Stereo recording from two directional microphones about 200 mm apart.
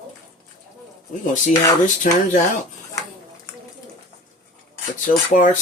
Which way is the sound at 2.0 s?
40° left (ahead or behind).